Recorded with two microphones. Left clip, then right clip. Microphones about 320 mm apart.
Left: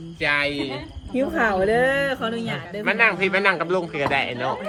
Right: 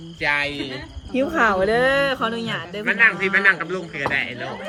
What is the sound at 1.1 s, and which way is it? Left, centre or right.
Speech, right.